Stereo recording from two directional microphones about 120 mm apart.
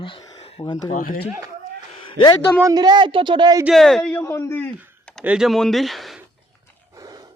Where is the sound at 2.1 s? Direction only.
45° left (ahead or behind).